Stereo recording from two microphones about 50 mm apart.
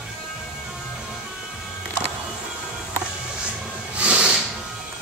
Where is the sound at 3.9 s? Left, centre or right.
Right.